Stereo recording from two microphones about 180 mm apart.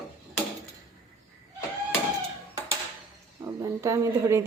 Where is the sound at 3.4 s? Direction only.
15° right (ahead or behind).